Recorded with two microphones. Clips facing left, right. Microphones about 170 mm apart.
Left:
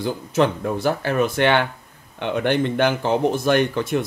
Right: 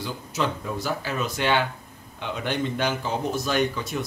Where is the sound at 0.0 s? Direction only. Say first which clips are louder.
Left 8 dB; 55° left (ahead or behind).